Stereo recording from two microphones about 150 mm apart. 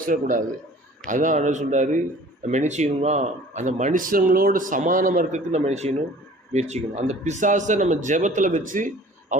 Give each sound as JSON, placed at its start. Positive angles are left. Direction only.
{"t": 0.0, "sound": "a man's voice", "side_deg": -65}